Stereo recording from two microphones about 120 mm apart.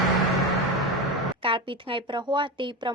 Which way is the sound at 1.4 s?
45° right (ahead or behind).